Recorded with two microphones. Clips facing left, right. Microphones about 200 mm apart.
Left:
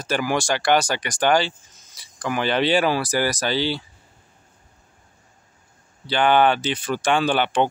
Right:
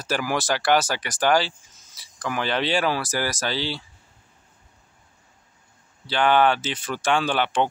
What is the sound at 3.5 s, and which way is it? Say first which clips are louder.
Speech: left 5 dB; 60° left (ahead or behind).